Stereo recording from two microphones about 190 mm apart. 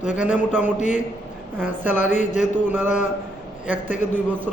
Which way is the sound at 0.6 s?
40° left (ahead or behind).